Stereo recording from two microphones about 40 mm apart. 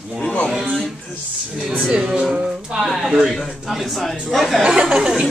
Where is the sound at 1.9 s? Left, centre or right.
Right.